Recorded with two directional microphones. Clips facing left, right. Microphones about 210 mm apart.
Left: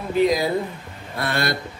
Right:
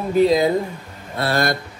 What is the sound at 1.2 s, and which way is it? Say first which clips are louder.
Speech: right 4 dB; 25° right (ahead or behind).